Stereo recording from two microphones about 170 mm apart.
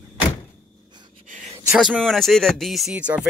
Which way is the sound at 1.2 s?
50° right (ahead or behind).